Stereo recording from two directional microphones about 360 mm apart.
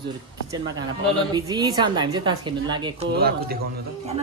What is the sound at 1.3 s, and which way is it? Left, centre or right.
A woman's voice, centre.